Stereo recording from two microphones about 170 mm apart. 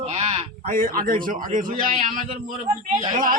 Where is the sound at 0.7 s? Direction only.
55° right (ahead or behind).